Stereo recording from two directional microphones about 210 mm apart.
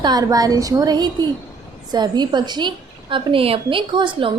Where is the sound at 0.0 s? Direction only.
20° right (ahead or behind).